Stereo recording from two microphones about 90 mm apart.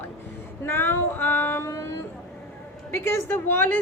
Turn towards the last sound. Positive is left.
turn(degrees=25)  # may be behind; listen again after turning